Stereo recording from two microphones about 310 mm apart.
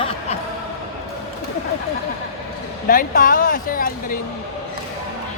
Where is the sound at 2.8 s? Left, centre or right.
Left.